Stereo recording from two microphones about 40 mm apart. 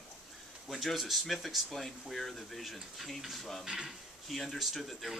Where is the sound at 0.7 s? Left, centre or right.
Centre.